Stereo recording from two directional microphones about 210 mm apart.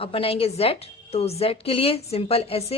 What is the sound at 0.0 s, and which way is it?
Speech, 25° left (ahead or behind).